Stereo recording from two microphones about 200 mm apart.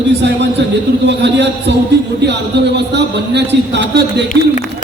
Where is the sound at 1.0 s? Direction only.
60° right (ahead or behind).